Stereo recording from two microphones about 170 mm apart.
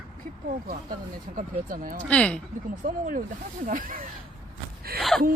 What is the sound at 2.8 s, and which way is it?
Speech, 50° right (ahead or behind).